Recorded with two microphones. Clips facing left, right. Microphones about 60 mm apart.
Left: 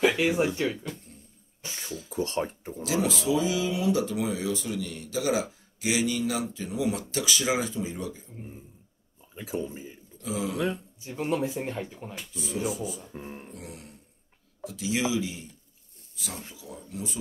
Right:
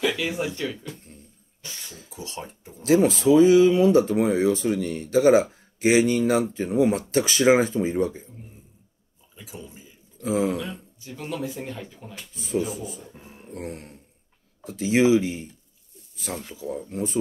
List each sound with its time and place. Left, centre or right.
0.0 s a sound: left
0.6 s speech: left
1.6 s a sound: left
2.0 s speech: left
2.8 s speech: right
9.3 s a sound: left
10.2 s speech: right
11.0 s speech: left
12.4 s speech: right
13.0 s speech: left
13.5 s speech: right